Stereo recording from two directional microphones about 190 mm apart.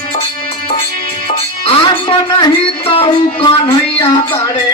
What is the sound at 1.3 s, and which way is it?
Speech, 25° left (ahead or behind).